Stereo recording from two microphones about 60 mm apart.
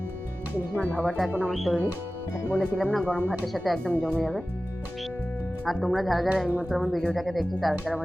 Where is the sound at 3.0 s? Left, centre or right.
Right.